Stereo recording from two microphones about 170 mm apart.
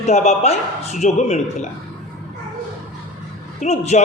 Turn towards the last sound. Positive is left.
turn(degrees=40)  # may be behind; listen again after turning